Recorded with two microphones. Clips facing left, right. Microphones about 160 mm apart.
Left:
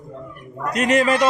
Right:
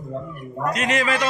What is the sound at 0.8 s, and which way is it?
Speech, 45° left (ahead or behind).